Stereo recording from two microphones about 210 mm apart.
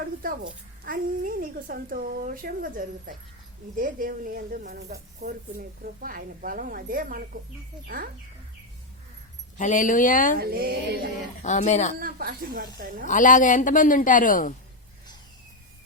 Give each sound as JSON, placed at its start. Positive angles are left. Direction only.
{"t": 0.2, "sound": "speech", "side_deg": -40}
{"t": 9.6, "sound": "a woman's voice", "side_deg": 40}
{"t": 10.4, "sound": "speech", "side_deg": -45}
{"t": 11.4, "sound": "a woman's voice", "side_deg": 35}
{"t": 11.9, "sound": "speech", "side_deg": -45}
{"t": 13.1, "sound": "a woman's voice", "side_deg": 35}